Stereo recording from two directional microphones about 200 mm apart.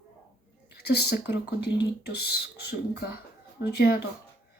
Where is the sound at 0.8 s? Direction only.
55° left (ahead or behind).